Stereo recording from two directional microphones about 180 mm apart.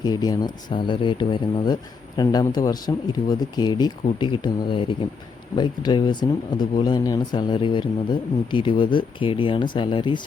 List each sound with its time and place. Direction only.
0.0 s speech: 20° left (ahead or behind)